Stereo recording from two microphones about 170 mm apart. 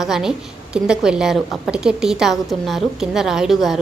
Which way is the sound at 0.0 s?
Centre (ahead or behind).